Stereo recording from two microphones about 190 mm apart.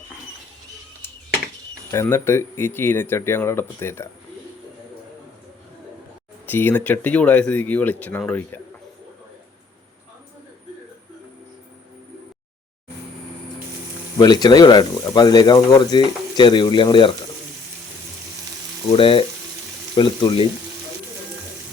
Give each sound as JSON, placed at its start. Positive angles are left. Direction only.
{"t": 1.9, "sound": "speech", "side_deg": 15}
{"t": 6.4, "sound": "speech", "side_deg": 10}
{"t": 14.2, "sound": "speech", "side_deg": 20}
{"t": 18.9, "sound": "speech", "side_deg": 25}